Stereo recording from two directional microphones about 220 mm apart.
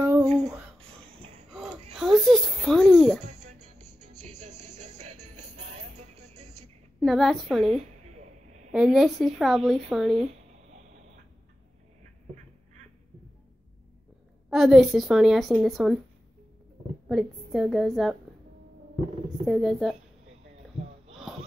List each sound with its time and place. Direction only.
0.0 s a sound: 15° right (ahead or behind)
1.5 s a sound: centre (ahead or behind)
3.8 s music: 35° right (ahead or behind)
7.0 s a woman's voice: centre (ahead or behind)
8.7 s a woman's voice: 5° right (ahead or behind)
14.5 s a woman's voice: centre (ahead or behind)
17.1 s a woman's voice: centre (ahead or behind)
19.4 s a woman's voice: centre (ahead or behind)